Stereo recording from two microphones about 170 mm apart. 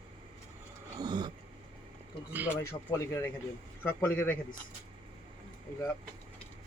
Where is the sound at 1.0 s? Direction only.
25° right (ahead or behind).